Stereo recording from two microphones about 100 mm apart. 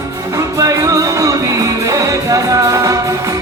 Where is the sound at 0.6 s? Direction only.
30° right (ahead or behind).